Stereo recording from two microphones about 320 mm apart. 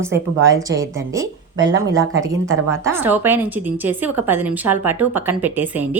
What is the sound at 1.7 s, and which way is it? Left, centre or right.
Speech, right.